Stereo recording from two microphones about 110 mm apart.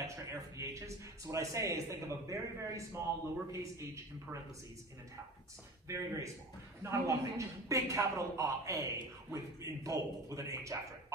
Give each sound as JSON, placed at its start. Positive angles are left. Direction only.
{"t": 0.0, "sound": "a man's voice", "side_deg": -25}
{"t": 5.9, "sound": "a man's voice", "side_deg": -30}